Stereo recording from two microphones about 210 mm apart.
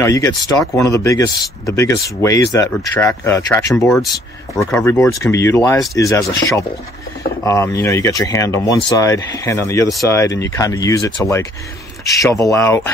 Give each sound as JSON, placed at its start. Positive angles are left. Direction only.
{"t": 0.0, "sound": "speech", "side_deg": 15}